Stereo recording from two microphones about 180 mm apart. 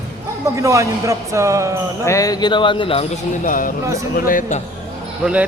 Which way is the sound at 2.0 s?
20° left (ahead or behind).